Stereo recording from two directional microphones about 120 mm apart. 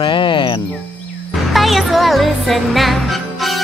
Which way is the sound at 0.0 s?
40° left (ahead or behind).